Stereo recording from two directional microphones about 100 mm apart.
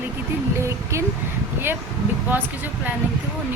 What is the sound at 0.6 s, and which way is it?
Speech, 30° right (ahead or behind).